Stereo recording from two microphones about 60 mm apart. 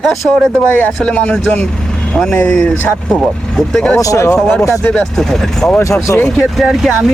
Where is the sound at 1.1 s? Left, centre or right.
Left.